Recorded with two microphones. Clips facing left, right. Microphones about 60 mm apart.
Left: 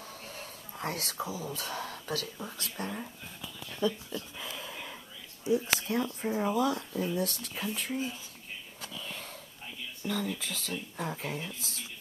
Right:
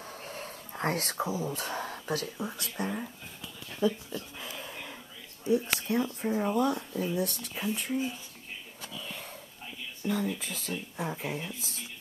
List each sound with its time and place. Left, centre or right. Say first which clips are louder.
0.0 s whispering: right 3 dB; right
2.2 s speech: right 4 dB; centre
4.4 s a sound: even; centre
5.4 s speech: right 1 dB; centre
8.8 s whispering: even; centre
10.0 s speech: right 3 dB; centre